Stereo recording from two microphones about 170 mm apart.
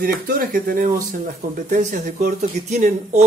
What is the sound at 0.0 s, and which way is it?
Speech, 60° right (ahead or behind).